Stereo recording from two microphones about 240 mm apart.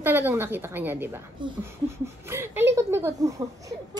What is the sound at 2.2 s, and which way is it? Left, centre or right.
A woman's voice, centre.